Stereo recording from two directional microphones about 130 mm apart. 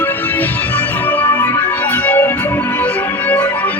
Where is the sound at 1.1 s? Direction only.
15° left (ahead or behind).